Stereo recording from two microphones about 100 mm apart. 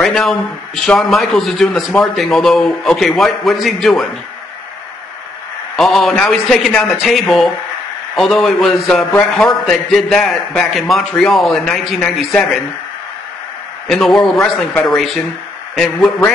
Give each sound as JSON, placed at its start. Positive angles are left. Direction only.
{"t": 0.0, "sound": "a man's voice", "side_deg": 5}
{"t": 5.8, "sound": "a man's voice", "side_deg": 0}
{"t": 13.8, "sound": "a man's voice", "side_deg": 0}